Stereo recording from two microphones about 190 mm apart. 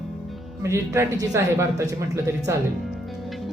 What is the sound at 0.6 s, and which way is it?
Speech, 15° right (ahead or behind).